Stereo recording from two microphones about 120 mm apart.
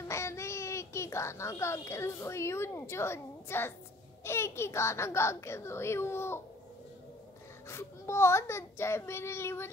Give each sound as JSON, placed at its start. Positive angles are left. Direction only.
{"t": 0.1, "sound": "a child's voice", "side_deg": 25}
{"t": 7.6, "sound": "a child's voice", "side_deg": 20}